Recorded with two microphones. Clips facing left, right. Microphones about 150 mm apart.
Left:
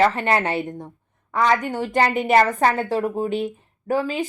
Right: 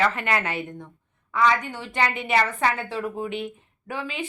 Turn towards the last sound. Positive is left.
turn(degrees=40)  # may be behind; listen again after turning